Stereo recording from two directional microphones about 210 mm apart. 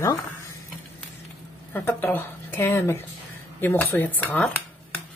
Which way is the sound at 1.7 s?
10° left (ahead or behind).